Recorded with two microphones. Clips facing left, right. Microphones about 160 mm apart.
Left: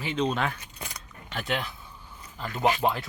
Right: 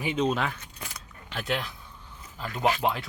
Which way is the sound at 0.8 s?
Centre (ahead or behind).